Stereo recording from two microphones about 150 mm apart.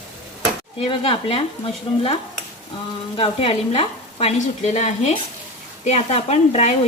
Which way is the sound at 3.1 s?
35° left (ahead or behind).